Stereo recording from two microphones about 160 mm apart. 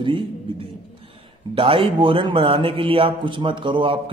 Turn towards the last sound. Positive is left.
turn(degrees=-30)  # may be behind; listen again after turning